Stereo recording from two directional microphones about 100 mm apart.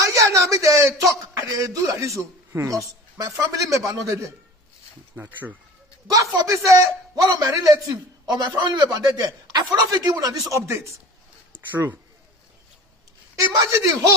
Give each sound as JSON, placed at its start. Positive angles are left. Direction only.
{"t": 0.0, "sound": "a man's voice", "side_deg": -30}
{"t": 5.1, "sound": "speech", "side_deg": -15}
{"t": 6.1, "sound": "a man's voice", "side_deg": -30}
{"t": 8.3, "sound": "a man's voice", "side_deg": -45}
{"t": 11.7, "sound": "speech", "side_deg": -20}
{"t": 13.4, "sound": "a man's voice", "side_deg": -35}